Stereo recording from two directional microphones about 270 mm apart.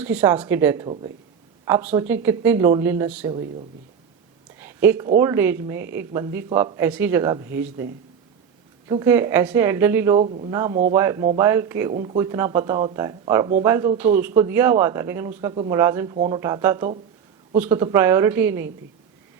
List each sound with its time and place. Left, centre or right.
0.0 s speech: centre
4.6 s speech: centre
8.9 s speech: centre
10.2 s speech: right
16.1 s speech: right
16.4 s speech: centre